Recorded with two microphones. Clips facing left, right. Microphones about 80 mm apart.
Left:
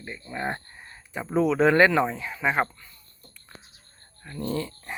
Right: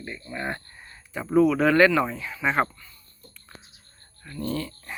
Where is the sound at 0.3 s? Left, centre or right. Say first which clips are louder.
Left 1 dB; left.